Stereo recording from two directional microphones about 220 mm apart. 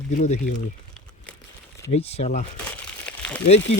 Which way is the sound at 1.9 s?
30° left (ahead or behind).